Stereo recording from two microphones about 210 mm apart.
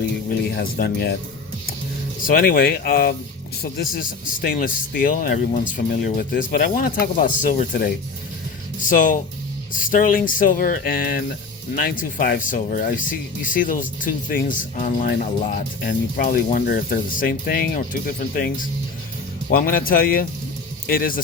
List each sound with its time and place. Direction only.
0.4 s speech: 50° left (ahead or behind)
2.2 s a man's voice: 40° left (ahead or behind)